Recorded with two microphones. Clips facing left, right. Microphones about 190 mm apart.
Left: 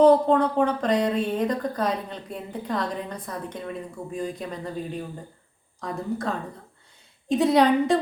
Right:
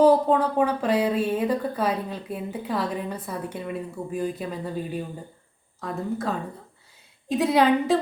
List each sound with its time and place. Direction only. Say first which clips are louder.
0.0 s a woman's voice: left 1 dB; 5° right (ahead or behind)